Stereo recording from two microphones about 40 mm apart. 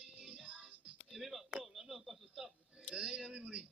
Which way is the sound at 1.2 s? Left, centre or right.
Centre.